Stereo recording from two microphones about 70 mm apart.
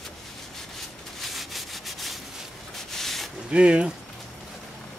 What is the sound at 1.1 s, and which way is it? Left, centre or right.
Rub, centre.